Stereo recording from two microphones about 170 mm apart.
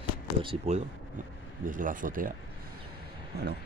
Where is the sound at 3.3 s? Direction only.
75° right (ahead or behind).